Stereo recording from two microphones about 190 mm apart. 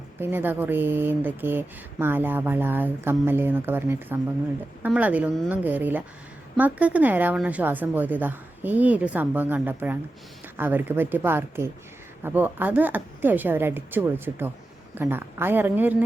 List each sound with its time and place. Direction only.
0.2 s speech: 10° right (ahead or behind)